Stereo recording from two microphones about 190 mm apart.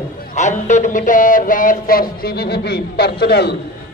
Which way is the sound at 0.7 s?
40° left (ahead or behind).